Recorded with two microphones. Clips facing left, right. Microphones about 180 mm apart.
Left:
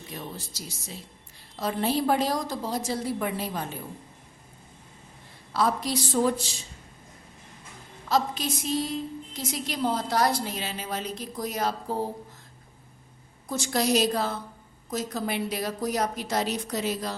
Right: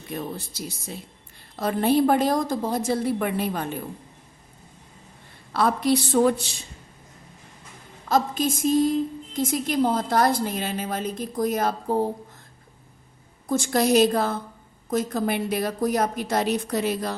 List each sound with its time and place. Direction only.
0.1 s a woman's voice: 55° right (ahead or behind)
5.5 s a woman's voice: 60° right (ahead or behind)
8.1 s a woman's voice: 50° right (ahead or behind)
13.5 s a woman's voice: 50° right (ahead or behind)